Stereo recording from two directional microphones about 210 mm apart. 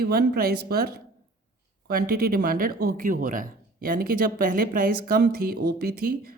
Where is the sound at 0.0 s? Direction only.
45° right (ahead or behind).